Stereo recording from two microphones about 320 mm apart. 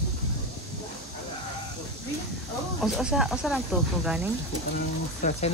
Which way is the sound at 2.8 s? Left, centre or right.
Centre.